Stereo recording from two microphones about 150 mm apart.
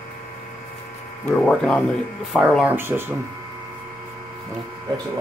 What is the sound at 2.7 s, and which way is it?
Speech, 15° right (ahead or behind).